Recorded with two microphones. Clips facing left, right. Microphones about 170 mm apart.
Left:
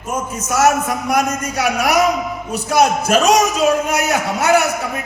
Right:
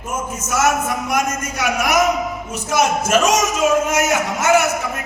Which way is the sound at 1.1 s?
35° left (ahead or behind).